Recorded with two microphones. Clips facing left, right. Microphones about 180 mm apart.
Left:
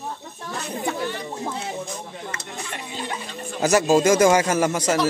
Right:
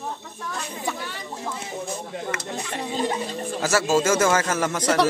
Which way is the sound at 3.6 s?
20° left (ahead or behind).